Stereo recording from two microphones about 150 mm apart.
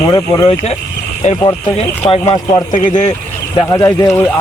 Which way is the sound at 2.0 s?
35° left (ahead or behind).